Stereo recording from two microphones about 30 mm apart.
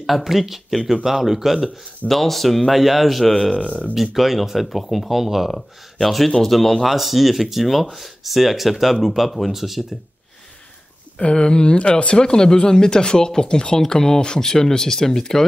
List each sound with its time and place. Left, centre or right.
0.0 s speech: centre
2.0 s speech: centre
3.5 s speech: left
3.9 s speech: centre
5.5 s speech: centre
11.1 s speech: left; by 15.4 s centre